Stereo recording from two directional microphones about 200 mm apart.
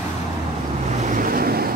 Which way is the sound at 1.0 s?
40° right (ahead or behind).